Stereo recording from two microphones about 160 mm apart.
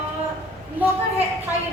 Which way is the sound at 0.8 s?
10° right (ahead or behind).